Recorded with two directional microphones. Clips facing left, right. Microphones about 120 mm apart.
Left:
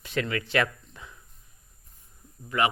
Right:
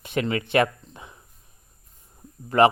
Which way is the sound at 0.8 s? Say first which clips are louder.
Right 3 dB; 25° right (ahead or behind).